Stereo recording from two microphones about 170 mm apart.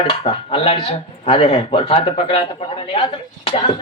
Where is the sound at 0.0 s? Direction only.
35° left (ahead or behind).